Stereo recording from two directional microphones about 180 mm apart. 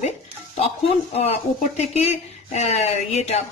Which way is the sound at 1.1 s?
35° left (ahead or behind).